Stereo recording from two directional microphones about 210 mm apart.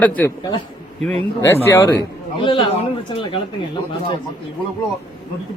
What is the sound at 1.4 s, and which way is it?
Speech, 10° left (ahead or behind).